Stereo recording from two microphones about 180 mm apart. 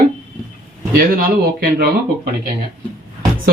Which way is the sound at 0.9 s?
55° right (ahead or behind).